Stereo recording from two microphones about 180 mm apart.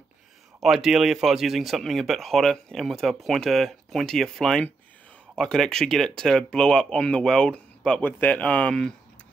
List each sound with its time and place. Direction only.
0.6 s speech: centre (ahead or behind)